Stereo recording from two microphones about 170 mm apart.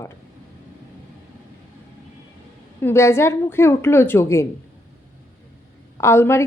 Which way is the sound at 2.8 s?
15° left (ahead or behind).